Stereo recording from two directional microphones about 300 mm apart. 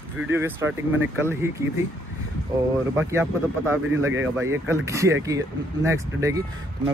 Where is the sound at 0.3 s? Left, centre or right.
Centre.